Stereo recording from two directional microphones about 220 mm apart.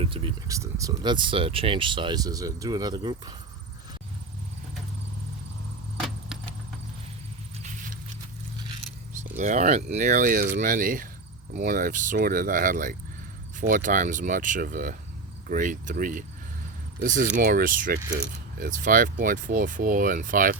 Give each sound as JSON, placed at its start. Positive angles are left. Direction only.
{"t": 0.0, "sound": "speech", "side_deg": -25}
{"t": 6.0, "sound": "a sound", "side_deg": 0}
{"t": 9.3, "sound": "speech", "side_deg": -35}